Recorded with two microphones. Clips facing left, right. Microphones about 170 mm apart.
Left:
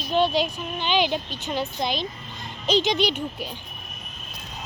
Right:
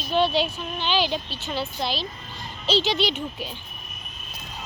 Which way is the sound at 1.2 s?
15° left (ahead or behind).